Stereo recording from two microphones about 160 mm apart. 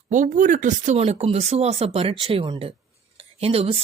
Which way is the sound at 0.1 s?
55° right (ahead or behind).